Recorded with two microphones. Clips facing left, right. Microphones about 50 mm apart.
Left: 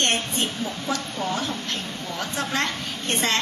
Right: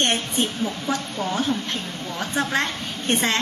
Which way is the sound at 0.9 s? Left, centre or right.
Right.